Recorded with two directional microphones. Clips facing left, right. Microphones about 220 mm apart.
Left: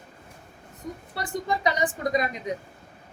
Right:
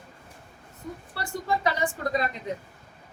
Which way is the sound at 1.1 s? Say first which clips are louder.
Left 1 dB; 20° left (ahead or behind).